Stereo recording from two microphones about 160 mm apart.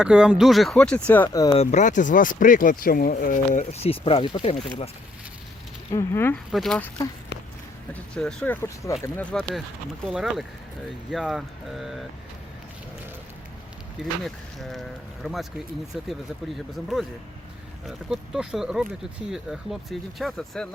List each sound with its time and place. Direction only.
0.0 s speech: 5° right (ahead or behind); by 1.4 s 10° left (ahead or behind)
1.6 s speech: 50° left (ahead or behind); by 4.5 s 35° left (ahead or behind)
5.9 s speech: 15° left (ahead or behind)
6.5 s speech: 5° left (ahead or behind)
8.1 s speech: 5° left (ahead or behind)
8.6 s speech: 20° left (ahead or behind)
10.1 s speech: centre (ahead or behind)
14.3 s speech: centre (ahead or behind)